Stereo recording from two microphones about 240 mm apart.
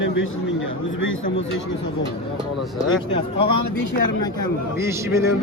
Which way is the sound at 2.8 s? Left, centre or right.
Left.